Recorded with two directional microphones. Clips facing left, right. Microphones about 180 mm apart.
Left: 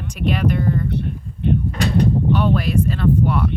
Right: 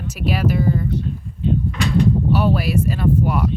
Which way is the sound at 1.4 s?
65° left (ahead or behind).